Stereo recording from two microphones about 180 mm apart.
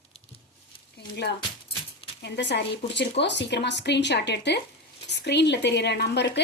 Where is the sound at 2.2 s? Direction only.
70° left (ahead or behind).